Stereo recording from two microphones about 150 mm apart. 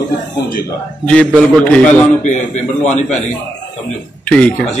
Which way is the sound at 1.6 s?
10° left (ahead or behind).